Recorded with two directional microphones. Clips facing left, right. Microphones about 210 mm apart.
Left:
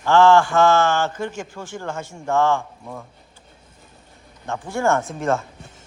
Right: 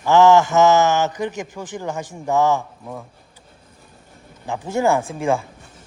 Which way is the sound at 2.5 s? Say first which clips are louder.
Right 1 dB; 5° right (ahead or behind).